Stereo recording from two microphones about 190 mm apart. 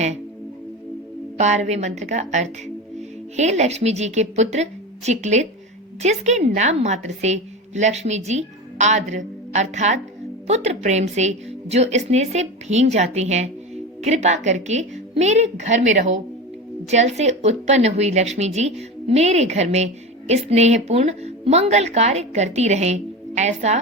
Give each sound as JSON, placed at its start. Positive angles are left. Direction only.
{"t": 1.4, "sound": "a woman's voice", "side_deg": -40}